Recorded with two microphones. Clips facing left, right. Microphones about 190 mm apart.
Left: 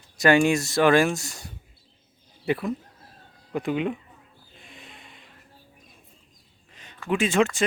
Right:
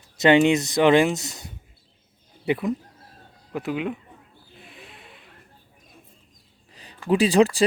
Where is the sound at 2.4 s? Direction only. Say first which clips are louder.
Right 2 dB; 15° right (ahead or behind).